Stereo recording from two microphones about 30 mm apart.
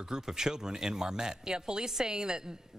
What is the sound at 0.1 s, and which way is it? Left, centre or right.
Speech, right.